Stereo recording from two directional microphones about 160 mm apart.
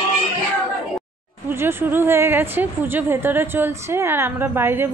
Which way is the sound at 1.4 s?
15° right (ahead or behind).